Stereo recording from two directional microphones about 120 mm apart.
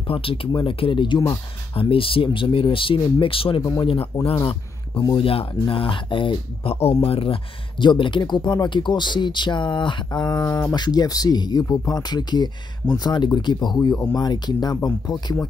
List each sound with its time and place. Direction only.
0.1 s speech: 50° left (ahead or behind)
7.8 s speech: 40° left (ahead or behind)